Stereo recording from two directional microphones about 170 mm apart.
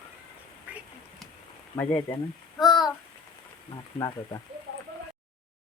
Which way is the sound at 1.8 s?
10° left (ahead or behind).